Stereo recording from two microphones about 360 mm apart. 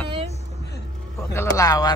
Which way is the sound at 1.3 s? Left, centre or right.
Centre.